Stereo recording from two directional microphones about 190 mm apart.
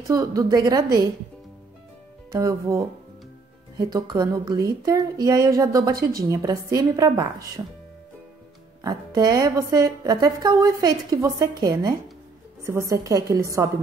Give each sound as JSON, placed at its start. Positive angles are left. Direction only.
{"t": 0.1, "sound": "a woman's voice", "side_deg": -15}
{"t": 2.3, "sound": "a woman's voice", "side_deg": -15}
{"t": 8.8, "sound": "a woman's voice", "side_deg": -20}